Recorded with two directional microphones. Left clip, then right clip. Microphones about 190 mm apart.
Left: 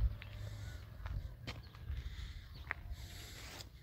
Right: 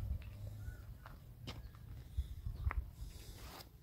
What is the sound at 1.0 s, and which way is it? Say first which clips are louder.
Walk: left 3 dB; 5° right (ahead or behind).